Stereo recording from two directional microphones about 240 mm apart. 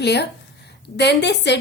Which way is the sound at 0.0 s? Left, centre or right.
Left.